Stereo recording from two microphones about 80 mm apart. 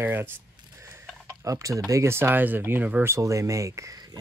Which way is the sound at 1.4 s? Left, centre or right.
Right.